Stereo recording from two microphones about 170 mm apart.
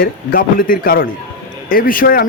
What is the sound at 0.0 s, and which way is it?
Speech, 55° left (ahead or behind).